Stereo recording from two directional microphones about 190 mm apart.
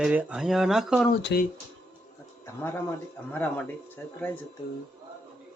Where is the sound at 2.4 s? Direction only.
10° left (ahead or behind).